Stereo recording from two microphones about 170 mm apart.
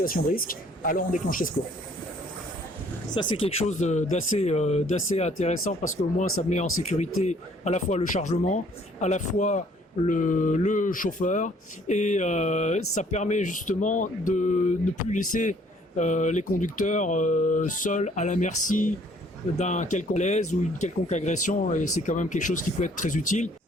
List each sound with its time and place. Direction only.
0.0 s speech: 55° left (ahead or behind)
3.2 s speech: 30° left (ahead or behind)
3.6 s speech: 45° left (ahead or behind)